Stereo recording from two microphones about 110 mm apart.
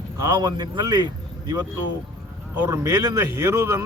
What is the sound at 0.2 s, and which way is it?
Speech, 35° right (ahead or behind).